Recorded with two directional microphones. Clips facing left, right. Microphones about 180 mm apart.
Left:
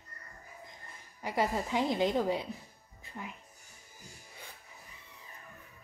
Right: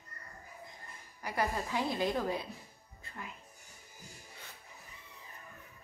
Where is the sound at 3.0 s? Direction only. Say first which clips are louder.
Left 3 dB; 15° left (ahead or behind).